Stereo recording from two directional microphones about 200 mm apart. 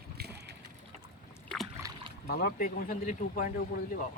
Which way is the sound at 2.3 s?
50° left (ahead or behind).